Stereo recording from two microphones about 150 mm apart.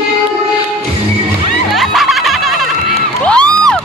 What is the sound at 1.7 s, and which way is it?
Music, centre (ahead or behind).